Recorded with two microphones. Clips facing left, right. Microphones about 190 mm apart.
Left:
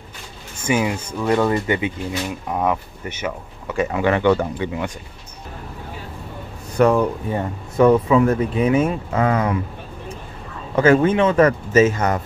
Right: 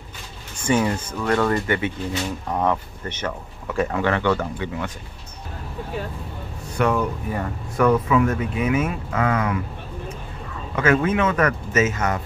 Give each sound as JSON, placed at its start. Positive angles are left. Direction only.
{"t": 0.7, "sound": "a man's voice", "side_deg": 10}
{"t": 4.0, "sound": "speech", "side_deg": 15}
{"t": 6.8, "sound": "speech", "side_deg": 35}
{"t": 10.8, "sound": "speech", "side_deg": 30}